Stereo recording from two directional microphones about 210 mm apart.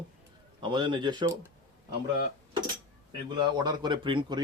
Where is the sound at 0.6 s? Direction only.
20° right (ahead or behind).